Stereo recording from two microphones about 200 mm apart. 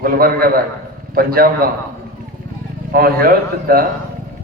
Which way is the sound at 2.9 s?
50° right (ahead or behind).